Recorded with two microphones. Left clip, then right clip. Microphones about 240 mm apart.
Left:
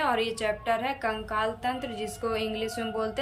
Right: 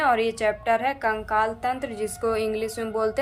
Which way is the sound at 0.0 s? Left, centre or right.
Centre.